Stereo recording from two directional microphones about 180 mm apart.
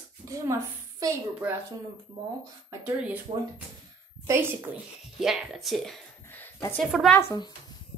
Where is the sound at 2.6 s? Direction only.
10° right (ahead or behind).